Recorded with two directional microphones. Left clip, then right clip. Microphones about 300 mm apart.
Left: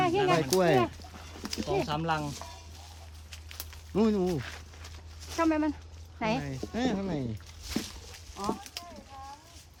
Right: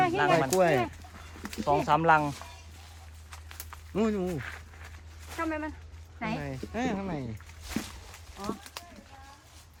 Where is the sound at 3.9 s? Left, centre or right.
Centre.